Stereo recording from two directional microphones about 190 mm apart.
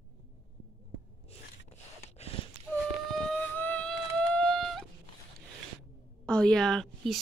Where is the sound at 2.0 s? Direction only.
35° left (ahead or behind).